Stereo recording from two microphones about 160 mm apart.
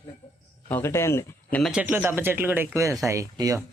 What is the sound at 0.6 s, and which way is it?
Speech, 15° left (ahead or behind).